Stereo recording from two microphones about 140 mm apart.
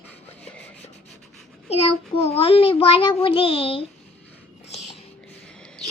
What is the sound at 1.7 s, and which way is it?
A child's voice, 45° left (ahead or behind).